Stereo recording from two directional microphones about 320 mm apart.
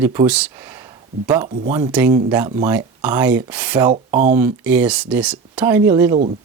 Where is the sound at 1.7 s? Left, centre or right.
Centre.